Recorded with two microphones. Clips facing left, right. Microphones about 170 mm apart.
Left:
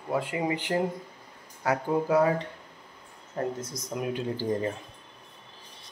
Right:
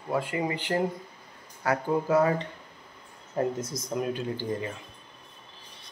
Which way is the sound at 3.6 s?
10° left (ahead or behind).